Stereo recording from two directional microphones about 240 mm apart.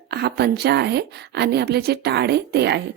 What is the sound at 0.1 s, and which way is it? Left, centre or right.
A woman's voice, right.